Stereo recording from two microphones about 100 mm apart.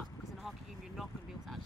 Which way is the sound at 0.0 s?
Centre (ahead or behind).